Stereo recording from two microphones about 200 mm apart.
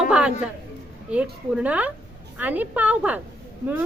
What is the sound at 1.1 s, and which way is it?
A woman's voice, 5° right (ahead or behind).